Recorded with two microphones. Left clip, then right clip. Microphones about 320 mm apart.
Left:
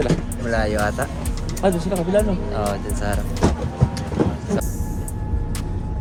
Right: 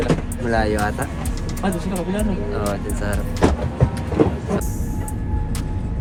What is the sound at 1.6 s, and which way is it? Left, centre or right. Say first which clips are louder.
Speech: left 5 dB; left.